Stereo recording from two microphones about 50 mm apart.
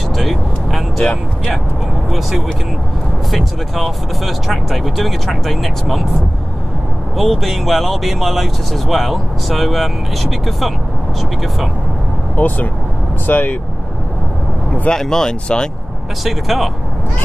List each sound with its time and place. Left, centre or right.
0.1 s vehicle: centre
3.3 s speech: centre
7.2 s speech: centre
12.4 s speech: left
14.9 s speech: centre
16.3 s speech: centre